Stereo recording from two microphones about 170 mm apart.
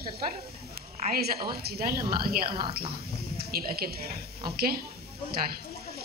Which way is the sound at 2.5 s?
30° right (ahead or behind).